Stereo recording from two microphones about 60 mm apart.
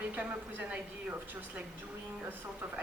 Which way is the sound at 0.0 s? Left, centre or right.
Right.